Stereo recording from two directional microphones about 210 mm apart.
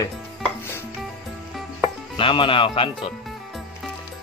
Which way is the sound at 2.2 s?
25° left (ahead or behind).